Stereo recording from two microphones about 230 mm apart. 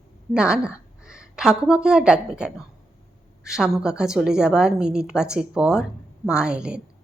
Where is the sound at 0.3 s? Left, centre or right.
Centre.